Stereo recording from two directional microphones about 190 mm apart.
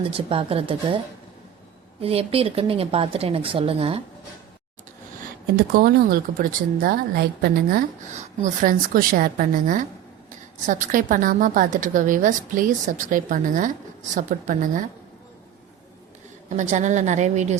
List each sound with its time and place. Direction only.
0.0 s speech: 30° right (ahead or behind)
2.0 s speech: 30° right (ahead or behind)
5.5 s a woman's voice: 55° right (ahead or behind)
16.5 s speech: 40° right (ahead or behind)